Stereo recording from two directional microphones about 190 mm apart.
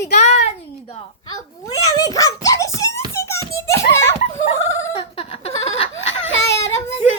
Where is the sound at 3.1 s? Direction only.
15° left (ahead or behind).